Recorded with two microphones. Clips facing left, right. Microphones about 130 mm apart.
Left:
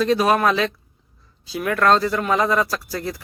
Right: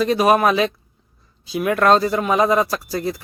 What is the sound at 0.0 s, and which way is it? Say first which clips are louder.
Speech: right 2 dB; 15° right (ahead or behind).